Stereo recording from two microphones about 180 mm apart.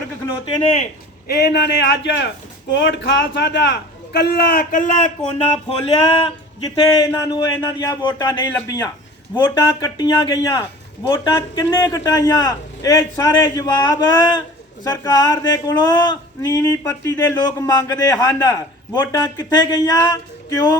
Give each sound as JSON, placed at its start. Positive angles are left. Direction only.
{"t": 0.4, "sound": "a man's voice", "side_deg": 30}
{"t": 1.4, "sound": "a man's voice", "side_deg": 65}
{"t": 5.6, "sound": "a man's voice", "side_deg": 30}
{"t": 7.1, "sound": "a man's voice", "side_deg": 15}